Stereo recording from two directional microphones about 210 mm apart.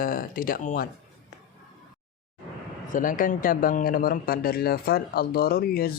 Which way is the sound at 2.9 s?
40° left (ahead or behind).